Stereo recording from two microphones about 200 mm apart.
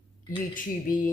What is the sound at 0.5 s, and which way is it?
Speech, 40° left (ahead or behind).